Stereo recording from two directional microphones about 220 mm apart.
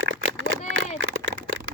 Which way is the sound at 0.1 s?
65° right (ahead or behind).